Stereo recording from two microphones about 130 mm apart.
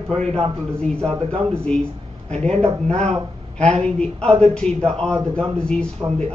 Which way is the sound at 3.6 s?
5° left (ahead or behind).